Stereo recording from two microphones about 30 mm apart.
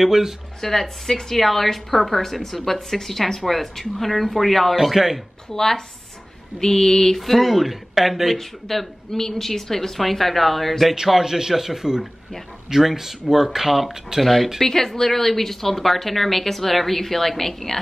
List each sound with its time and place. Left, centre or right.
0.0 s speech: centre
0.6 s a woman's voice: centre
4.9 s speech: centre
5.5 s a woman's voice: centre
7.2 s speech: centre
8.4 s a woman's voice: centre
11.1 s speech: centre
14.6 s a woman's voice: centre